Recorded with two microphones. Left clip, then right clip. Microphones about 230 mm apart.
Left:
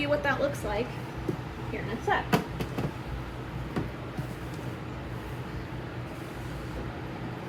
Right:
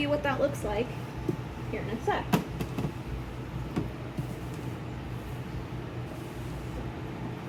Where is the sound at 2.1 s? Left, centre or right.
Centre.